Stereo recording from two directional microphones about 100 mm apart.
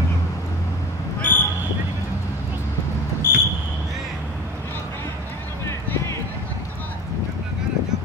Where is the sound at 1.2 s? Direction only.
20° left (ahead or behind).